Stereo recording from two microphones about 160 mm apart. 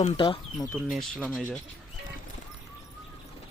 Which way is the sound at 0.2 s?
30° left (ahead or behind).